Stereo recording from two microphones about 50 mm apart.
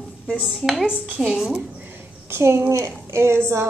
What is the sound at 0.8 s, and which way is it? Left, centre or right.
Speech, right.